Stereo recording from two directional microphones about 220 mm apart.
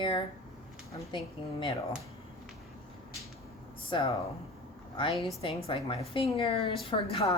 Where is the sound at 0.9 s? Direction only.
20° left (ahead or behind).